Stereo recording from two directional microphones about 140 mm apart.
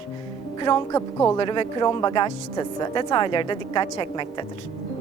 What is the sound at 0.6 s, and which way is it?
Speech, 25° left (ahead or behind).